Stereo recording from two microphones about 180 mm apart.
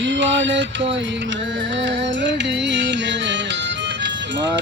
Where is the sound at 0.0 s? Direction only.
90° right.